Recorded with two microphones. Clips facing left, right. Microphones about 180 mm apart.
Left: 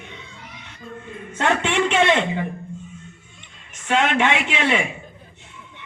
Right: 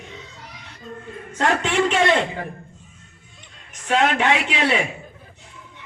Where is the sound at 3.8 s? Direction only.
40° right (ahead or behind).